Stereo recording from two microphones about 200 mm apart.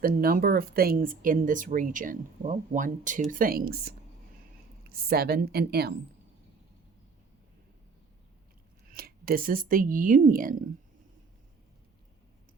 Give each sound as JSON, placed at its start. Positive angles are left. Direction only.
{"t": 0.0, "sound": "a woman's voice", "side_deg": -45}
{"t": 8.9, "sound": "speech", "side_deg": -50}